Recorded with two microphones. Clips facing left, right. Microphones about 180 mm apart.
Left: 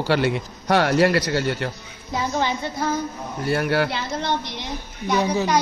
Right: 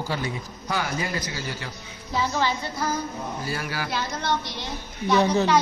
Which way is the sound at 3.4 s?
60° left (ahead or behind).